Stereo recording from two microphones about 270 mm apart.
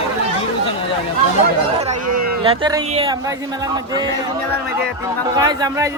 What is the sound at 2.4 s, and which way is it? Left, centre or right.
A man's voice, centre.